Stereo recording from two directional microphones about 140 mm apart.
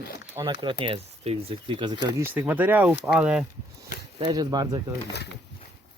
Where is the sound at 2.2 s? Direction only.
15° right (ahead or behind).